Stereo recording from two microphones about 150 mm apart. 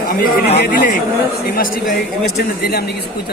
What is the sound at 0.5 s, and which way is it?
Speech, 75° left (ahead or behind).